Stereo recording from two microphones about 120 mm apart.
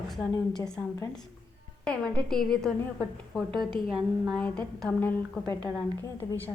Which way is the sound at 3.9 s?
10° right (ahead or behind).